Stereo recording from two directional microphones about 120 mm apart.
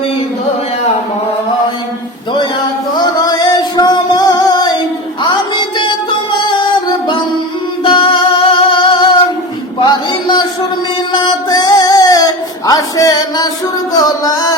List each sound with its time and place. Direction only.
3.0 s music: 35° left (ahead or behind)
7.9 s music: 40° left (ahead or behind)
10.1 s a sound: 40° left (ahead or behind)
11.1 s music: 40° left (ahead or behind)